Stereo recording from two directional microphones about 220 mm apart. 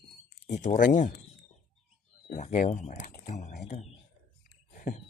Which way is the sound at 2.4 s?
30° left (ahead or behind).